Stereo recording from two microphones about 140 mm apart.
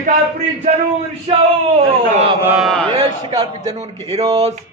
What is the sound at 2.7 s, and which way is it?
Speech, 10° left (ahead or behind).